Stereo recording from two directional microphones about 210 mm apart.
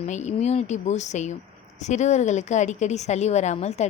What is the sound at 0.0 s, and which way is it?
A woman's voice, 35° left (ahead or behind).